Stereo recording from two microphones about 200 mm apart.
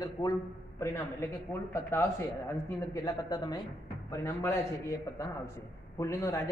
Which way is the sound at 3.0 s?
20° left (ahead or behind).